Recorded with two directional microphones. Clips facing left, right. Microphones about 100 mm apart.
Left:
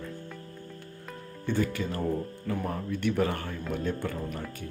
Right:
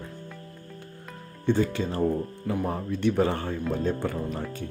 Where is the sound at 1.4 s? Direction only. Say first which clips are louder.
Right 5 dB; 25° right (ahead or behind).